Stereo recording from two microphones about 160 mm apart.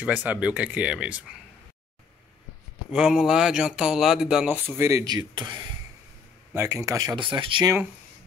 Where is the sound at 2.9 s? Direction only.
5° right (ahead or behind); by 5.7 s 30° right (ahead or behind).